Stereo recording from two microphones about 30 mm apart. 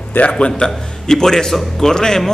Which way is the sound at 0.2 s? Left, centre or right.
Left.